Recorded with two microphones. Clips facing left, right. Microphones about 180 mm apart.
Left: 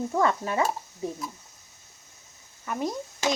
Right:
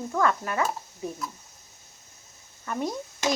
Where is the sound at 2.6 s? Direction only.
Centre (ahead or behind).